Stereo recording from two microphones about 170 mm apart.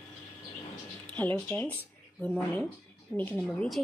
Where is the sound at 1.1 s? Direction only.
10° left (ahead or behind).